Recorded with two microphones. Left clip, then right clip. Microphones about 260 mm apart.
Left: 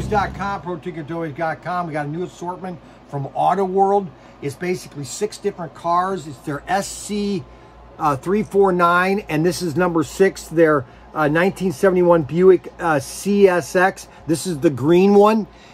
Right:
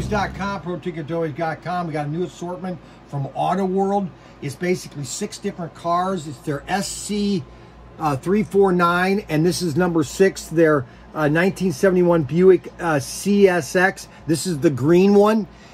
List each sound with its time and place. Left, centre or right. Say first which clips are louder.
0.1 s speech: left 3 dB; centre
3.3 s speech: left 4 dB; centre